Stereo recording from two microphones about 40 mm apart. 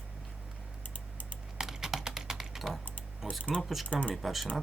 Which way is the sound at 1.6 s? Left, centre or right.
Centre.